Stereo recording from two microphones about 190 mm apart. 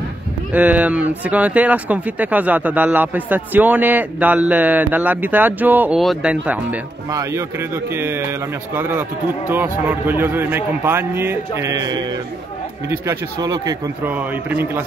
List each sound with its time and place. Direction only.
0.5 s speech: 10° right (ahead or behind)
14.0 s speech: 10° right (ahead or behind)